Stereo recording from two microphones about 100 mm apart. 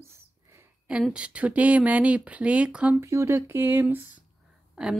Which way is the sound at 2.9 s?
25° right (ahead or behind).